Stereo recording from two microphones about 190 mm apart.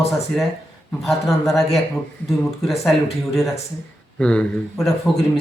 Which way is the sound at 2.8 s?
Centre (ahead or behind).